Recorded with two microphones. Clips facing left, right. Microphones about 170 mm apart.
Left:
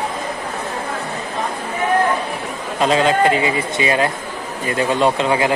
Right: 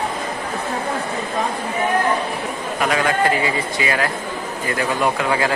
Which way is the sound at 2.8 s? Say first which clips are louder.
Left 4 dB; 25° left (ahead or behind).